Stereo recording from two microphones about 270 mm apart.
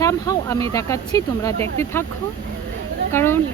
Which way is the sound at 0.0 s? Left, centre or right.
Centre.